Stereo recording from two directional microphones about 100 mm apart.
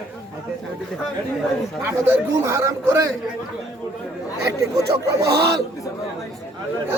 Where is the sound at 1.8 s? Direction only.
25° right (ahead or behind).